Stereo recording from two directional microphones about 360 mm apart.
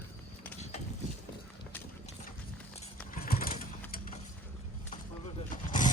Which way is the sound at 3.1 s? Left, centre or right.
Left.